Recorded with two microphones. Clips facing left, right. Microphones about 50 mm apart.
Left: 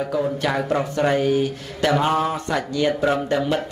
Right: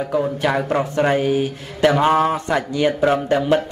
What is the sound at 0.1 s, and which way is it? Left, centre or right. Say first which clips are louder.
Speech: right 5 dB; centre.